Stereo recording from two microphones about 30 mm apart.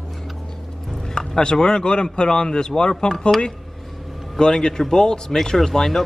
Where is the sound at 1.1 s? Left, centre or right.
Left.